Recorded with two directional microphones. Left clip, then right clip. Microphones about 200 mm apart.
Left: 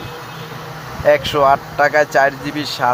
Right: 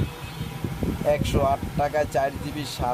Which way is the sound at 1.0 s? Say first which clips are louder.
Left 11 dB; centre (ahead or behind).